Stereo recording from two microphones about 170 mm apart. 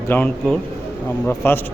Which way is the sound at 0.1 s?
5° left (ahead or behind).